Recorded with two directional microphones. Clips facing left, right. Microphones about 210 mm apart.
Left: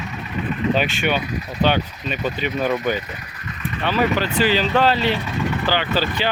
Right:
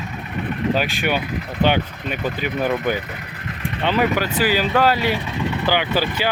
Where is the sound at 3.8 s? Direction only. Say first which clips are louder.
Right 1 dB; 15° right (ahead or behind).